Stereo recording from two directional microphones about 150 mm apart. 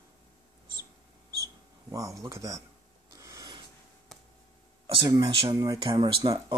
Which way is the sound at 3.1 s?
25° right (ahead or behind).